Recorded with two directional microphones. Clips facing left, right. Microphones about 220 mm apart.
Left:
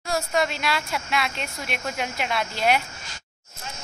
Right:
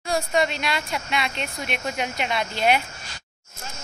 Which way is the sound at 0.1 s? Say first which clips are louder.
Right 2 dB; centre (ahead or behind).